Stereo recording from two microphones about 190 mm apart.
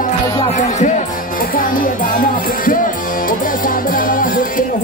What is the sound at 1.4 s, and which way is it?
Music, 45° left (ahead or behind).